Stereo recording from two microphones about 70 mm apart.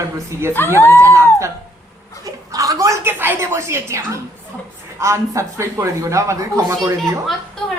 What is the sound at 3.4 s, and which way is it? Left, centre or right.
A man's voice, right.